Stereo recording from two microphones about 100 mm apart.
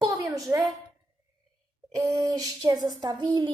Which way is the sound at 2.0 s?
35° right (ahead or behind).